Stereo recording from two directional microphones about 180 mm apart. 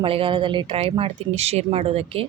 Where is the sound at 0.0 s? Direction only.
30° right (ahead or behind).